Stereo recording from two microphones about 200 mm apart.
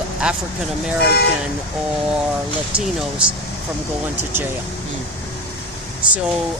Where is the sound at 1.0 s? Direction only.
55° left (ahead or behind).